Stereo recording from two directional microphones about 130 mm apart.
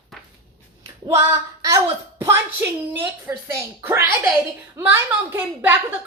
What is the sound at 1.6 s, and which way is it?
A woman's voice, 25° right (ahead or behind).